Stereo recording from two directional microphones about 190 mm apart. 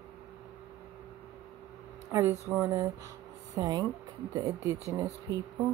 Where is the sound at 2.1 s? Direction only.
15° right (ahead or behind).